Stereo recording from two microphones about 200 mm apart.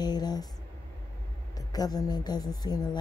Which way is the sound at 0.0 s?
20° left (ahead or behind).